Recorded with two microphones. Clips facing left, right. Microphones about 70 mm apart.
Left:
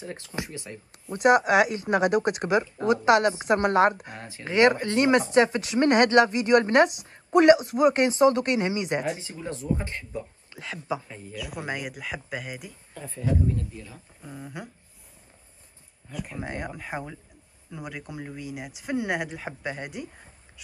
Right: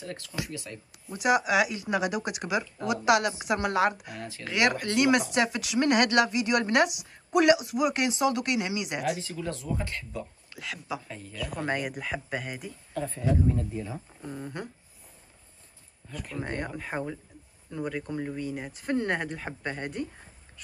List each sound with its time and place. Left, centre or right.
0.0 s speech: left
1.1 s speech: left
9.2 s speech: left
11.1 s speech: centre
16.1 s speech: centre